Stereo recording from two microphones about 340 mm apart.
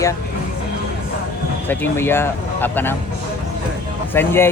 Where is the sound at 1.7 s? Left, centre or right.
Centre.